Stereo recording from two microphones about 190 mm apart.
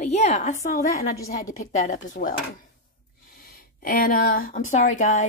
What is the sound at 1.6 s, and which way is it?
Speech, 35° left (ahead or behind).